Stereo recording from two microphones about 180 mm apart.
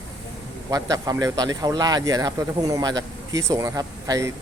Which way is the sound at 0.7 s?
20° right (ahead or behind).